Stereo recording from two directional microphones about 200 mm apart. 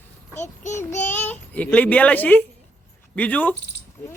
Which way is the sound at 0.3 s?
35° left (ahead or behind).